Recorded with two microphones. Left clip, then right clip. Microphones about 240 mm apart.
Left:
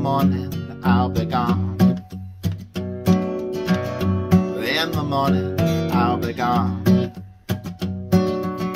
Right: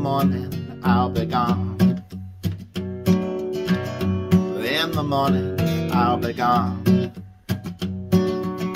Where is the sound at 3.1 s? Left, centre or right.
Centre.